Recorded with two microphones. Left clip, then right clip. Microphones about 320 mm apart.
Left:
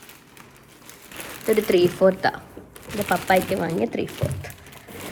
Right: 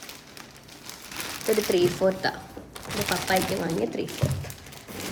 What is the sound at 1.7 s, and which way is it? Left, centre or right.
Speech, centre.